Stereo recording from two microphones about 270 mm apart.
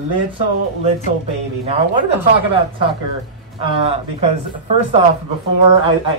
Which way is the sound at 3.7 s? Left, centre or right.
Right.